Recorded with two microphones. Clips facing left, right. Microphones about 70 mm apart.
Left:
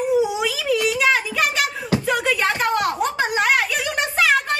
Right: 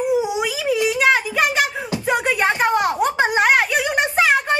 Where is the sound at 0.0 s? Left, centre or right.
Centre.